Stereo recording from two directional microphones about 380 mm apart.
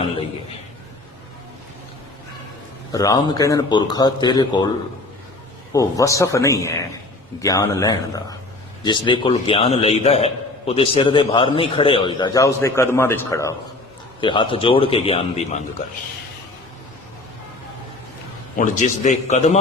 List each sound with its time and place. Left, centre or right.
2.9 s a man's voice: centre
5.7 s a man's voice: centre
18.5 s a man's voice: centre